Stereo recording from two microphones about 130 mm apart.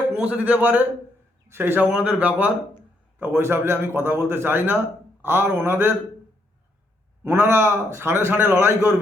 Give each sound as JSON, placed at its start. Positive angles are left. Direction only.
{"t": 0.1, "sound": "a man's voice", "side_deg": -10}
{"t": 7.3, "sound": "a man's voice", "side_deg": -20}